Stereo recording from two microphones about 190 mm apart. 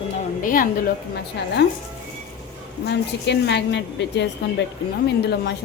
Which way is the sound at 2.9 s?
65° left (ahead or behind).